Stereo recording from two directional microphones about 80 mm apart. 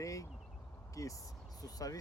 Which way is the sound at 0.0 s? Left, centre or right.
Left.